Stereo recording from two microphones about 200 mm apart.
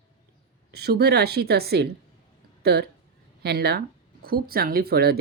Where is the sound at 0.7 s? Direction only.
55° right (ahead or behind).